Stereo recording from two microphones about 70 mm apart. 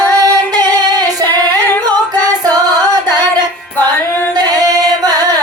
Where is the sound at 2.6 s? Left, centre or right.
Right.